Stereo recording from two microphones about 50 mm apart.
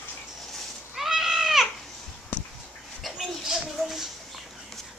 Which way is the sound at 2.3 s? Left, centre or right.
Left.